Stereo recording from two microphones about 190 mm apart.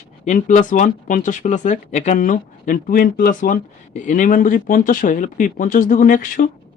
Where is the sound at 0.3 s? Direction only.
40° left (ahead or behind).